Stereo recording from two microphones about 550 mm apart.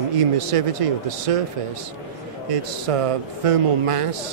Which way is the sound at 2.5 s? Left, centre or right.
Right.